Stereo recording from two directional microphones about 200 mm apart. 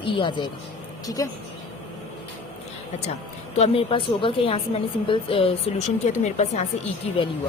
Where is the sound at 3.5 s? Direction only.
30° left (ahead or behind).